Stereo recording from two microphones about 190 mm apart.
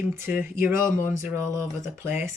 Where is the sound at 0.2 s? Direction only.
10° right (ahead or behind).